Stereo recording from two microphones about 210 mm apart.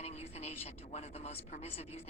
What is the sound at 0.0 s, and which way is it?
A woman's voice, 30° left (ahead or behind).